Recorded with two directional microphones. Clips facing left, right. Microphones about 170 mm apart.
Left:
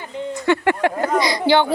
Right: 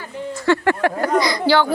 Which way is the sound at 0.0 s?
20° left (ahead or behind).